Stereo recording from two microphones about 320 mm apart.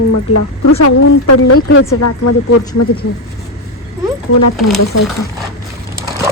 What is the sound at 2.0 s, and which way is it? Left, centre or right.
Speech, left.